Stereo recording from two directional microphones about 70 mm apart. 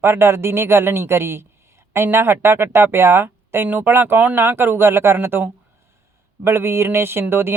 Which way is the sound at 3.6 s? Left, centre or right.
Right.